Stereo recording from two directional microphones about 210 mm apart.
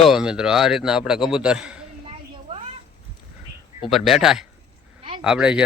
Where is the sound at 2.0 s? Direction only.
30° right (ahead or behind).